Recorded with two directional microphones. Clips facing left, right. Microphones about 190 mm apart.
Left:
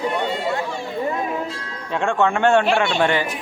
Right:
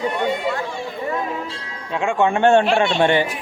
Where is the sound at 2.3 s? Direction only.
20° right (ahead or behind).